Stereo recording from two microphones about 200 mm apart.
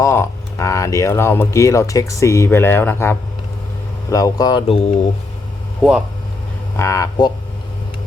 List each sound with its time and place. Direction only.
0.0 s speech: 15° left (ahead or behind)
5.8 s speech: 5° right (ahead or behind)
6.7 s speech: 15° left (ahead or behind)